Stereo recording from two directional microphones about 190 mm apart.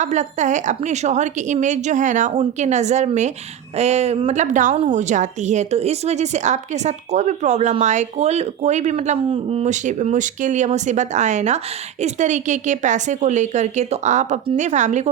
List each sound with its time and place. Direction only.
0.0 s a woman's voice: 40° right (ahead or behind)